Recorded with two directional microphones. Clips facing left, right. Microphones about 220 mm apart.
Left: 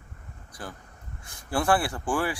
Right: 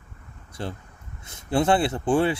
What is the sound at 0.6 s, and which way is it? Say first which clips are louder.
Speech: right 7 dB; 25° right (ahead or behind).